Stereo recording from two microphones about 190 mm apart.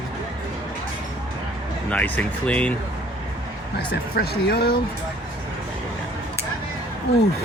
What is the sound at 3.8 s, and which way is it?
Speech, 55° left (ahead or behind).